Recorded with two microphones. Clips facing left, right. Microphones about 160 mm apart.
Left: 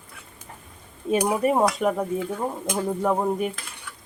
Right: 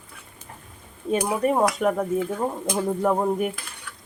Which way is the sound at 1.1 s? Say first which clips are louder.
Left 1 dB; 10° left (ahead or behind).